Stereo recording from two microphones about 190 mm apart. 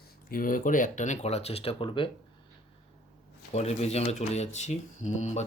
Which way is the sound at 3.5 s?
35° left (ahead or behind).